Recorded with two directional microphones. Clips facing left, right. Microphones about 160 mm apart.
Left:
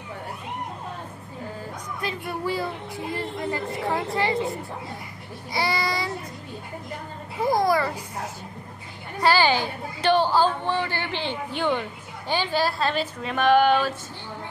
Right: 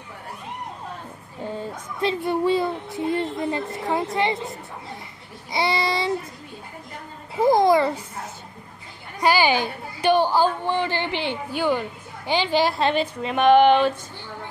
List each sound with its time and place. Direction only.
1.6 s speech: 25° right (ahead or behind)
3.9 s child singing: 20° right (ahead or behind)
5.5 s child singing: 25° right (ahead or behind)
7.6 s child singing: 25° right (ahead or behind)
9.2 s a woman's voice: 15° right (ahead or behind)
12.3 s child singing: 20° right (ahead or behind)